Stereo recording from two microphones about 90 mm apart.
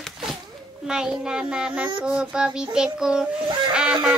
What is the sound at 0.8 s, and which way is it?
Child singing, 10° right (ahead or behind).